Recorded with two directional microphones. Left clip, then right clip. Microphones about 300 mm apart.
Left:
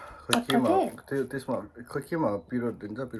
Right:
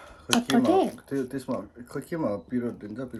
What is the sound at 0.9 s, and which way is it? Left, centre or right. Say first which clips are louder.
Speech: even; centre.